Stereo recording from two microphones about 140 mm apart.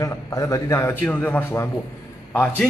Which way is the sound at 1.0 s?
10° left (ahead or behind).